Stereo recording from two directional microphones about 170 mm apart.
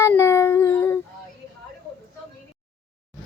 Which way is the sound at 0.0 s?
15° left (ahead or behind).